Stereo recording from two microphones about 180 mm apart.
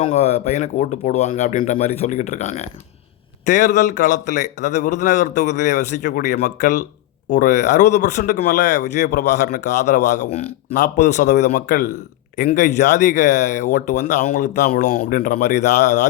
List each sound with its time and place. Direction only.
0.1 s a man's voice: 35° left (ahead or behind)